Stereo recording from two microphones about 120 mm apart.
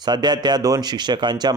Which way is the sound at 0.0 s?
35° right (ahead or behind).